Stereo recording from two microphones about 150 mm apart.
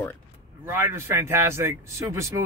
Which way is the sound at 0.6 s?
15° right (ahead or behind).